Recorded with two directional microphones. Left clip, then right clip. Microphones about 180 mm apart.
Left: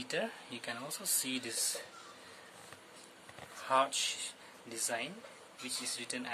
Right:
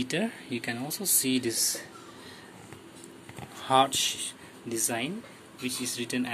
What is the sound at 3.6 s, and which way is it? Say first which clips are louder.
Speech: right 8 dB; centre (ahead or behind).